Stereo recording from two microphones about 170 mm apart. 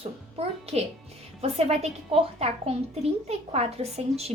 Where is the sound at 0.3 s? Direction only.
35° right (ahead or behind).